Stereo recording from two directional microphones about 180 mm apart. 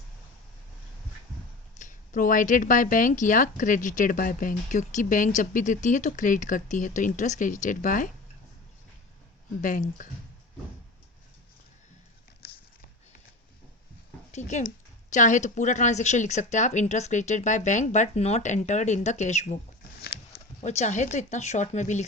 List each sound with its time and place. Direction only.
1.8 s speech: 45° left (ahead or behind)
9.6 s speech: 45° left (ahead or behind)
12.4 s a sound: 60° left (ahead or behind)
14.3 s speech: 40° left (ahead or behind)